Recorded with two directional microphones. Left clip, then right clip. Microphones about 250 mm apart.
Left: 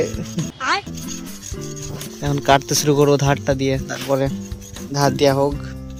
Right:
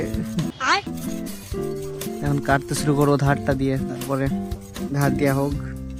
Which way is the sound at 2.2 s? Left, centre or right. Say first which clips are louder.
Left 6 dB; centre.